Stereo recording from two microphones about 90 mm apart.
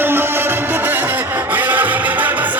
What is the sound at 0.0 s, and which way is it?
Music, 25° right (ahead or behind).